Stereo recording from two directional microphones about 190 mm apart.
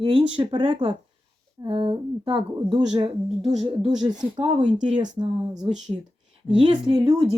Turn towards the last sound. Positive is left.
turn(degrees=-20)  # may be behind; listen again after turning